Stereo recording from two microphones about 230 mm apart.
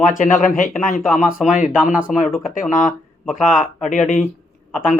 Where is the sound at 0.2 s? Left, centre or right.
Left.